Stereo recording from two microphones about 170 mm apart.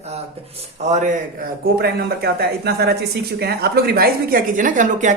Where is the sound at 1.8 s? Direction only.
70° right (ahead or behind).